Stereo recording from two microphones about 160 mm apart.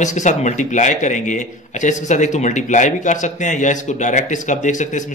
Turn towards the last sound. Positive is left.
turn(degrees=50)  # may be behind; listen again after turning